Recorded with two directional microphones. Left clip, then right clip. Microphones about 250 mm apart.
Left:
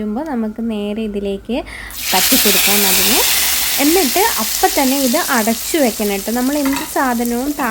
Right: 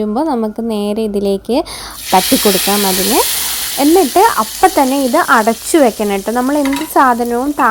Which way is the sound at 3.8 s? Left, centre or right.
Centre.